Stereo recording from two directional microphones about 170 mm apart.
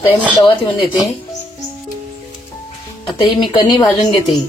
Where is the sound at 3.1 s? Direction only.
30° left (ahead or behind).